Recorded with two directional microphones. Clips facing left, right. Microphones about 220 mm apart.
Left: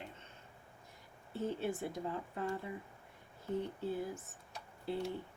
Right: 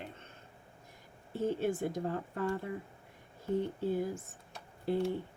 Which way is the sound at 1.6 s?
50° right (ahead or behind).